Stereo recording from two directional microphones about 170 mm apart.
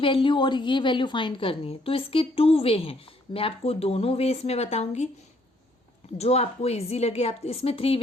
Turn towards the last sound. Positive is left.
turn(degrees=35)  # may be behind; listen again after turning